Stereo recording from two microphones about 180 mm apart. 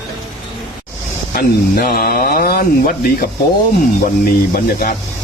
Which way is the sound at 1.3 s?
55° left (ahead or behind).